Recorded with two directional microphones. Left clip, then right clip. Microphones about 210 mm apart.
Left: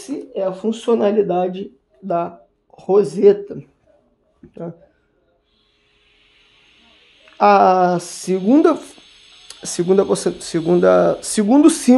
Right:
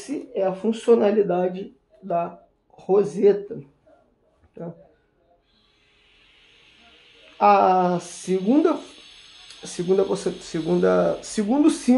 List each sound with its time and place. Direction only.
0.0 s speech: 30° left (ahead or behind)
7.3 s speech: 45° left (ahead or behind)